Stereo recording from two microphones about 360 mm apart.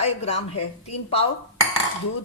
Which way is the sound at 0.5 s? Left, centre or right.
Left.